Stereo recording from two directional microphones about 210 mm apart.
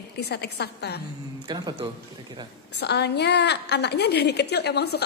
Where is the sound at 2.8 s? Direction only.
55° left (ahead or behind).